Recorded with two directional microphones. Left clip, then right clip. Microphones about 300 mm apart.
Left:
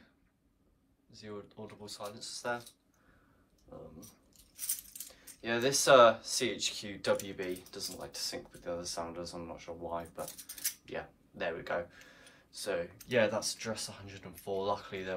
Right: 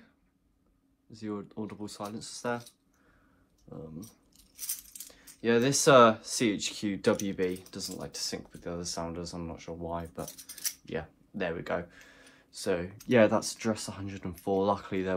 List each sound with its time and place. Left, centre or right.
1.1 s speech: centre
4.9 s speech: right